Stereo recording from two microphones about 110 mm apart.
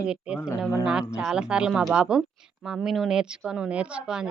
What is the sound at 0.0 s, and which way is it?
Speech, 10° right (ahead or behind).